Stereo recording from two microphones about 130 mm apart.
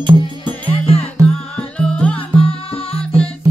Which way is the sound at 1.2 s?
10° left (ahead or behind).